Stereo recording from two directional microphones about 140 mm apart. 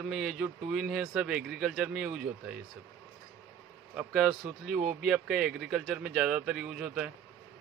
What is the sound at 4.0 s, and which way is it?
Speech, 5° right (ahead or behind).